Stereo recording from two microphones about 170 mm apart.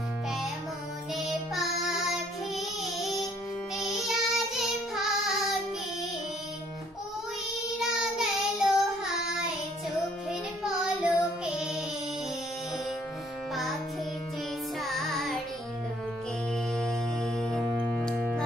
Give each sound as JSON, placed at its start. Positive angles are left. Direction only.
{"t": 1.1, "sound": "child singing", "side_deg": 0}
{"t": 7.8, "sound": "child singing", "side_deg": 0}
{"t": 10.6, "sound": "child singing", "side_deg": -5}
{"t": 11.5, "sound": "music", "side_deg": -5}
{"t": 14.8, "sound": "music", "side_deg": 0}
{"t": 16.7, "sound": "music", "side_deg": 0}